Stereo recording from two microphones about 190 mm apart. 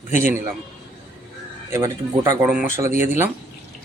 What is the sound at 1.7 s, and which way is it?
A man's voice, 15° right (ahead or behind).